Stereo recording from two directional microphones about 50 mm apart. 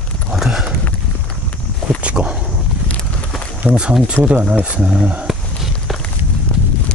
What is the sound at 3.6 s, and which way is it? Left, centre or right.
Speech, right.